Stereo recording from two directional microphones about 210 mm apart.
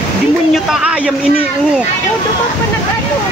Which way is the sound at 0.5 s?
5° right (ahead or behind).